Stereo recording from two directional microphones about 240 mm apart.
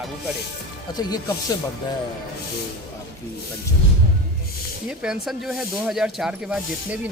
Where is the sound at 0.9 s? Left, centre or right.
Centre.